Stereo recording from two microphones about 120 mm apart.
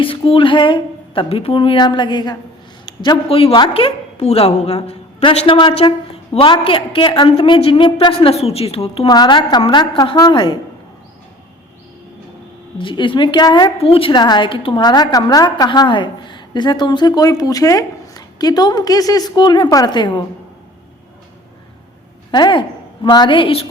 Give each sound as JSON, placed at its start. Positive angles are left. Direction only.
{"t": 0.0, "sound": "a woman's voice", "side_deg": 50}
{"t": 3.2, "sound": "a woman's voice", "side_deg": 55}
{"t": 5.8, "sound": "a woman's voice", "side_deg": 40}
{"t": 9.0, "sound": "a woman's voice", "side_deg": 35}
{"t": 12.8, "sound": "a woman's voice", "side_deg": 45}
{"t": 13.7, "sound": "a woman's voice", "side_deg": 50}
{"t": 22.3, "sound": "a woman's voice", "side_deg": 40}